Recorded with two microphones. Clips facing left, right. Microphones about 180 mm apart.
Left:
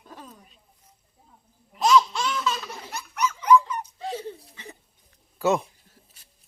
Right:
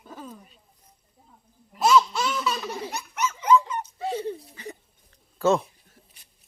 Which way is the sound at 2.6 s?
20° right (ahead or behind).